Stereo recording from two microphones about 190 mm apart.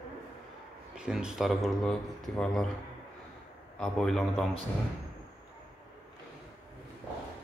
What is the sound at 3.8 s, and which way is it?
Speech, centre (ahead or behind).